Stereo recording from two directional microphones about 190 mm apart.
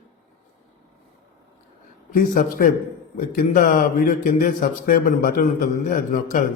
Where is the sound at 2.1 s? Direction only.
45° left (ahead or behind).